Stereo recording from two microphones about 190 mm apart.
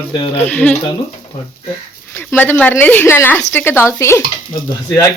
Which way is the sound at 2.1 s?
10° left (ahead or behind).